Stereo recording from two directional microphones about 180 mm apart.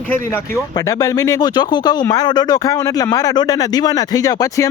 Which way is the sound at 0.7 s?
20° left (ahead or behind).